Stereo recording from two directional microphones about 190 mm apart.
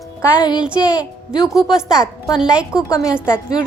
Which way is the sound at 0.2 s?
20° left (ahead or behind).